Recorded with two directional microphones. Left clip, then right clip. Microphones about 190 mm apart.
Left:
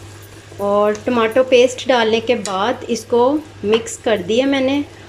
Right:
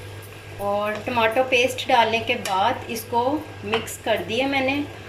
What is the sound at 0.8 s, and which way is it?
Speech, 40° left (ahead or behind).